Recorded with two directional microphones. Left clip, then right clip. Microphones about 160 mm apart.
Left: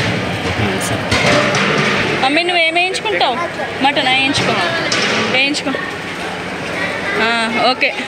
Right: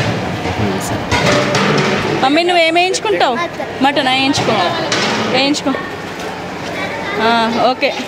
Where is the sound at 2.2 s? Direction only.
35° right (ahead or behind).